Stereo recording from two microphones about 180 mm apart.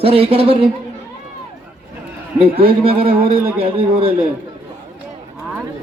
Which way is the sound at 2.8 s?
30° right (ahead or behind).